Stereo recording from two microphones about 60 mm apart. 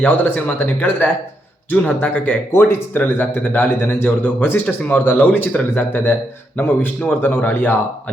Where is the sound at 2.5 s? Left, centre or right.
Left.